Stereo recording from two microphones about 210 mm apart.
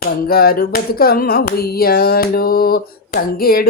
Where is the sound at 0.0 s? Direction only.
45° left (ahead or behind).